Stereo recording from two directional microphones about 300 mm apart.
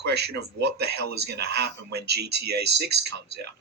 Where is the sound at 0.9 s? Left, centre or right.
Right.